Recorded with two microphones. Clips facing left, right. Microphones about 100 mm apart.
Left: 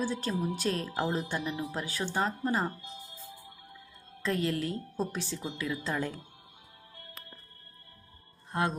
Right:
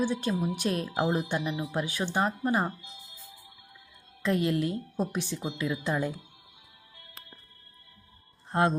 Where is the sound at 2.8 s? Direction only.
40° left (ahead or behind).